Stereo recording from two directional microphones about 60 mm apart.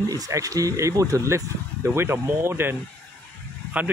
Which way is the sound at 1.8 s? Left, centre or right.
Right.